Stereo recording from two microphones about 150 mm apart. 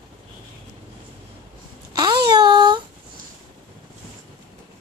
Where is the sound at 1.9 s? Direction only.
25° right (ahead or behind).